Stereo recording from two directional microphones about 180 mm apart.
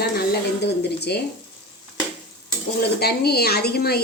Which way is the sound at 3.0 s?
60° left (ahead or behind).